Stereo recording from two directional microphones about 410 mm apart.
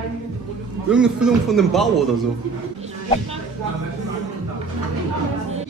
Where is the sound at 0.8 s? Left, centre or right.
Centre.